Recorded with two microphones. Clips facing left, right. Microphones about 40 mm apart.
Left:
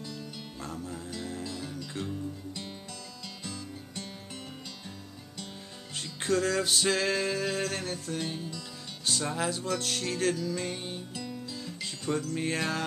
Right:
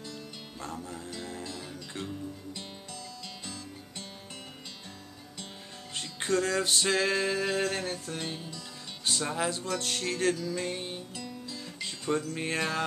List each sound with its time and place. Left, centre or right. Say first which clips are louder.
0.0 s music: left 2 dB; centre
5.9 s music: even; centre
12.4 s music: right 1 dB; centre